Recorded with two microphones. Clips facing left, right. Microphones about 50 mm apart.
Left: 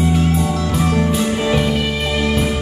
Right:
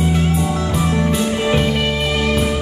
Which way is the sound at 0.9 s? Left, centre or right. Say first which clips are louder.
Left 1 dB; right.